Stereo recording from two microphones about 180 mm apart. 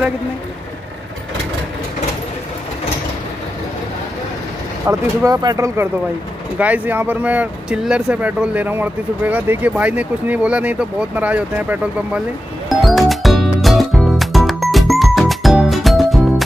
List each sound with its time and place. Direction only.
4.8 s speech: 20° right (ahead or behind)
6.6 s speech: 10° right (ahead or behind)
12.6 s music: centre (ahead or behind)